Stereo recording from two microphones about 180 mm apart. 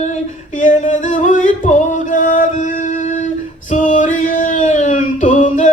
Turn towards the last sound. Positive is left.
turn(degrees=45)  # may be behind; listen again after turning